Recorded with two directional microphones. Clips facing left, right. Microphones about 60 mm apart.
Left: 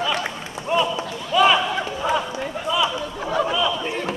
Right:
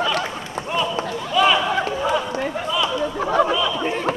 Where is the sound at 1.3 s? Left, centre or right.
Centre.